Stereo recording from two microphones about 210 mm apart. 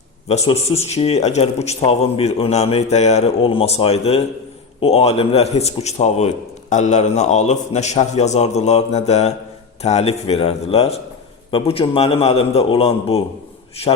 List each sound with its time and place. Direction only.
0.3 s speech: 30° left (ahead or behind)